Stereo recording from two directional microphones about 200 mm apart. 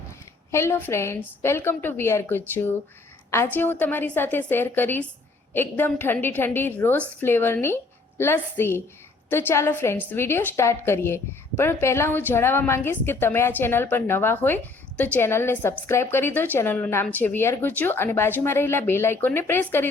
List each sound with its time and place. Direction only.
0.5 s a woman's voice: 10° left (ahead or behind)